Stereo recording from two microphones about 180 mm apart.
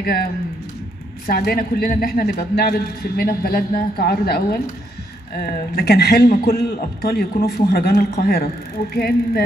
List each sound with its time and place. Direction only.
0.0 s a man's voice: 60° left (ahead or behind)